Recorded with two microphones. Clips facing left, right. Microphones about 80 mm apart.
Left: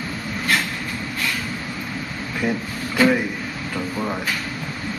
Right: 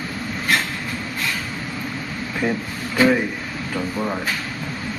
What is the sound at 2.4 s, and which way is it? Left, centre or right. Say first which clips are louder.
Speech: right 1 dB; right.